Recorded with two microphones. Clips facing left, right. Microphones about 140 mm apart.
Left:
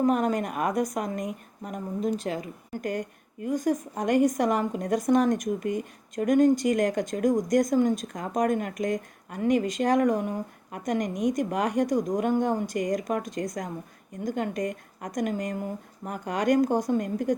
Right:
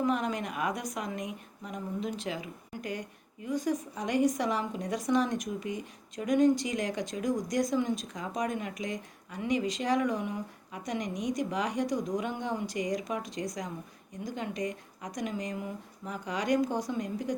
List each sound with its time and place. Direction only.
0.0 s a woman's voice: 45° left (ahead or behind)